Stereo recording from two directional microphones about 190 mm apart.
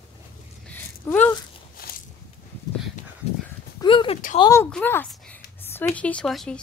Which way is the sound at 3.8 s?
25° left (ahead or behind).